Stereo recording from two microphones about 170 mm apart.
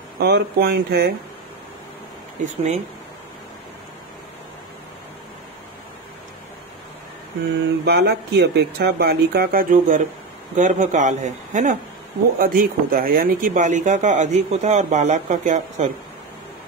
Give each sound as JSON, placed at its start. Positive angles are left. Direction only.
{"t": 0.2, "sound": "speech", "side_deg": -70}
{"t": 2.4, "sound": "speech", "side_deg": -40}
{"t": 7.8, "sound": "speech", "side_deg": -75}
{"t": 12.4, "sound": "speech", "side_deg": -55}